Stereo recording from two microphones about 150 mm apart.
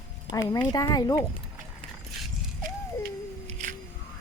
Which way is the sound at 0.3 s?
60° right (ahead or behind).